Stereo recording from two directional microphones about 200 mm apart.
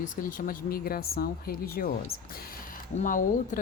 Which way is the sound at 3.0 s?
40° left (ahead or behind).